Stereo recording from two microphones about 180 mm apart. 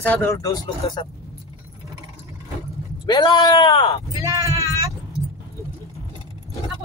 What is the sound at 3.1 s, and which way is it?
Speech, 25° left (ahead or behind).